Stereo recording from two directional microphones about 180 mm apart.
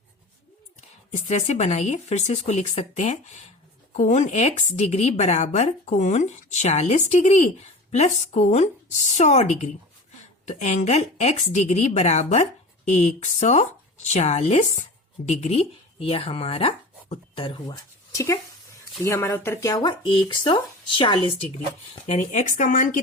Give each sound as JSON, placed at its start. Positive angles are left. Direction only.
{"t": 1.1, "sound": "speech", "side_deg": 40}